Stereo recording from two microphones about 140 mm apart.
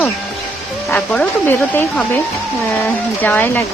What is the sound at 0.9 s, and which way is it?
Speech, 10° left (ahead or behind).